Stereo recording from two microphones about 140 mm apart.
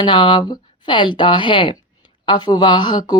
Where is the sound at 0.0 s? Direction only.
35° left (ahead or behind).